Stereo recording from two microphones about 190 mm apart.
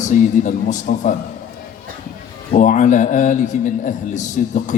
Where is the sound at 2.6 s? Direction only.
40° left (ahead or behind).